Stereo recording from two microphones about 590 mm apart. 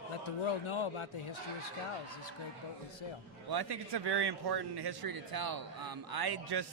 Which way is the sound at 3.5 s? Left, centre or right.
Right.